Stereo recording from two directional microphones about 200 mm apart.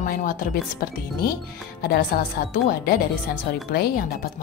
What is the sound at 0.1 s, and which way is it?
A woman's voice, 45° left (ahead or behind).